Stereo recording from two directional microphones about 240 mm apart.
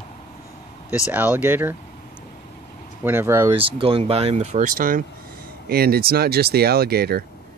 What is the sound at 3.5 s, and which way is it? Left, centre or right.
Speech, right.